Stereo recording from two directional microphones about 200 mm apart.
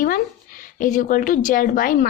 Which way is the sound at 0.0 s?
45° left (ahead or behind).